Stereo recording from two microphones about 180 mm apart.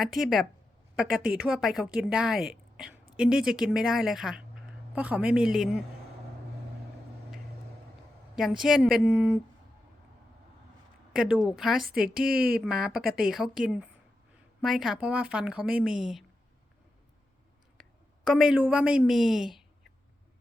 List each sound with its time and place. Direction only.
0.0 s a woman's voice: centre (ahead or behind)
1.5 s a woman's voice: centre (ahead or behind)
8.4 s a woman's voice: centre (ahead or behind)
11.1 s a woman's voice: 5° right (ahead or behind)
12.0 s speech: 55° right (ahead or behind)
12.6 s a woman's voice: 5° right (ahead or behind)
13.0 s speech: 55° right (ahead or behind)
13.2 s a woman's voice: centre (ahead or behind)
17.8 s a sound: centre (ahead or behind)
18.3 s a woman's voice: 5° right (ahead or behind)